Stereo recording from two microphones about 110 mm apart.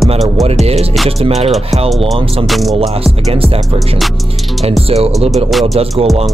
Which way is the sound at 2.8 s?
70° right (ahead or behind).